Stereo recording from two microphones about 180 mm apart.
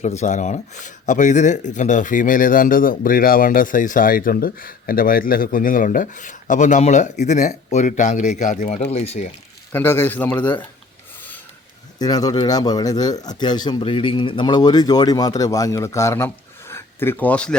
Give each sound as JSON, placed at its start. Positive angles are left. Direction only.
{"t": 0.0, "sound": "speech", "side_deg": 40}
{"t": 8.8, "sound": "speech", "side_deg": 35}
{"t": 9.7, "sound": "a man's voice", "side_deg": 10}
{"t": 11.9, "sound": "speech", "side_deg": 20}